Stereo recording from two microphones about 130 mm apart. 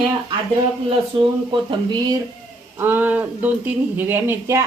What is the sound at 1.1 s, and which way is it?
A woman's voice, 40° right (ahead or behind).